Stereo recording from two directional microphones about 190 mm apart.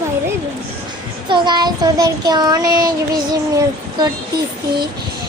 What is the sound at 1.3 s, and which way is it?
Speech, 25° right (ahead or behind).